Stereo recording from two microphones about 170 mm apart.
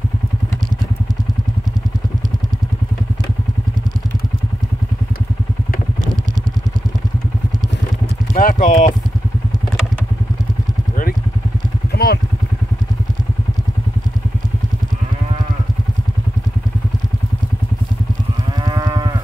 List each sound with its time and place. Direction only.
8.3 s clip-clop: 50° left (ahead or behind)
11.9 s vehicle: 70° left (ahead or behind)
18.6 s moo: 25° right (ahead or behind)